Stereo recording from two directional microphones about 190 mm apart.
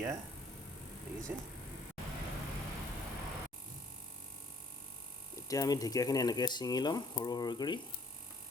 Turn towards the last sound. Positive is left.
turn(degrees=20)  # may be behind; listen again after turning